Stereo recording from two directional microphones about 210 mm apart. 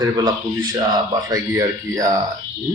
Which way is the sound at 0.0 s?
20° right (ahead or behind).